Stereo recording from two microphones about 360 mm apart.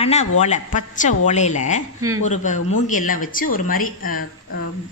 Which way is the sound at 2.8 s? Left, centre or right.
Left.